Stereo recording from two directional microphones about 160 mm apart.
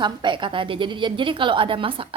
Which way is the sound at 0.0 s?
30° right (ahead or behind).